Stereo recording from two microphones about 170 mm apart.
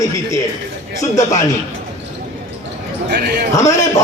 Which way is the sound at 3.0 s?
60° right (ahead or behind).